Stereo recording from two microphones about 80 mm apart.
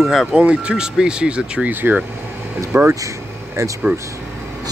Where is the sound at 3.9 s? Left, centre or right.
Right.